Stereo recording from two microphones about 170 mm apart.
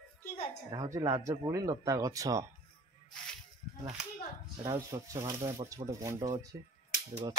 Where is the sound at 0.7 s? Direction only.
20° right (ahead or behind).